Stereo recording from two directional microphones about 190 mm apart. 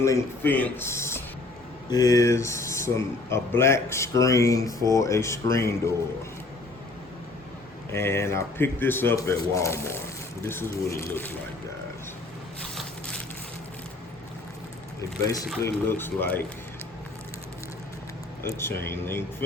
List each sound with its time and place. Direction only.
0.0 s speech: 10° left (ahead or behind)
7.9 s speech: 15° left (ahead or behind)
12.7 s a sound: 5° left (ahead or behind)
15.6 s speech: 10° left (ahead or behind)
18.4 s speech: 10° left (ahead or behind)